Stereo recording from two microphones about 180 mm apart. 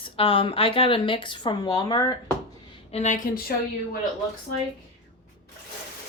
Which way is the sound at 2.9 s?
40° left (ahead or behind).